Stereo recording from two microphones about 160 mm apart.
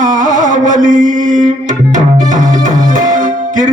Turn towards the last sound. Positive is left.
turn(degrees=-50)  # may be behind; listen again after turning